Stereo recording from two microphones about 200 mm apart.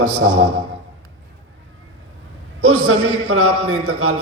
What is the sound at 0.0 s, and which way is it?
Speech, 90° right.